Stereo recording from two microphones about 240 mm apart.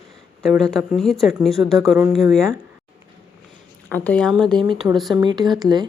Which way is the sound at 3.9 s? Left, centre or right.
Centre.